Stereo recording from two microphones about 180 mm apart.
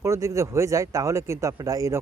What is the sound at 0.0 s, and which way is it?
Speech, 15° right (ahead or behind).